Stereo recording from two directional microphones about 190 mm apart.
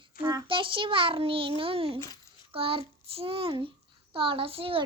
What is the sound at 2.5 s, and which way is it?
Child singing, 30° right (ahead or behind).